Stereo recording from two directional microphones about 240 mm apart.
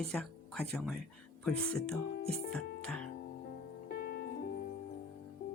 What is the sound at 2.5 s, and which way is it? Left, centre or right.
Music, centre.